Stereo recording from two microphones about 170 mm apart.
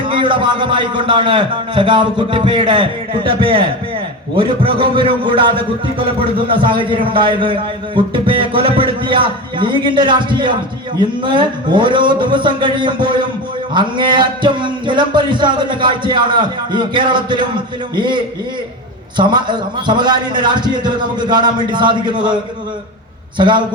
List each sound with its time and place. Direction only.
0.0 s music: 30° right (ahead or behind)
3.2 s a man's voice: 30° right (ahead or behind)
4.4 s music: 30° right (ahead or behind)
23.4 s music: 25° right (ahead or behind)